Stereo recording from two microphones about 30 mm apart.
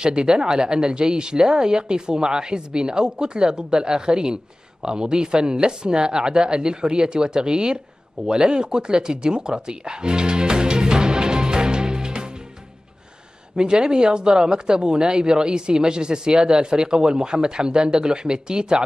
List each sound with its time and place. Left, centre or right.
0.0 s speech: right
8.3 s a sound: right
13.6 s speech: right